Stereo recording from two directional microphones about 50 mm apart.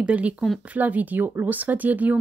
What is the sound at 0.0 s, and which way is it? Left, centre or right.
Speech, right.